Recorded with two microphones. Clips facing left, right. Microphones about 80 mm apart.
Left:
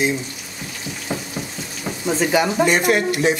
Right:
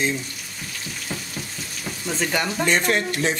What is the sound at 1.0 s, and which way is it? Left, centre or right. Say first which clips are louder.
Frying: left 7 dB; centre.